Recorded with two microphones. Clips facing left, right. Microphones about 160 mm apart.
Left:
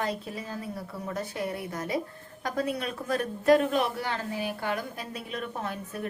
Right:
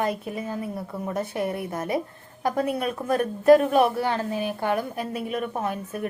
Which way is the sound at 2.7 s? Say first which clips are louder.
Right 5 dB; 50° right (ahead or behind).